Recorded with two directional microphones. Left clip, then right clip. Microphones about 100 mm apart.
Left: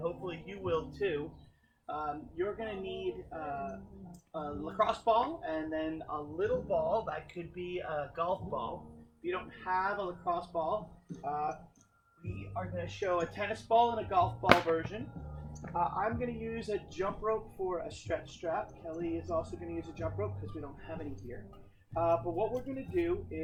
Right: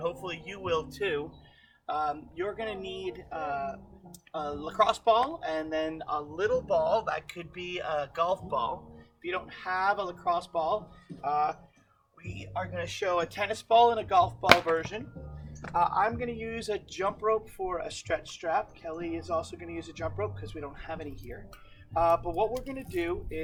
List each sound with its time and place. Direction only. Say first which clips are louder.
0.0 s speech: right 4 dB; 15° right (ahead or behind)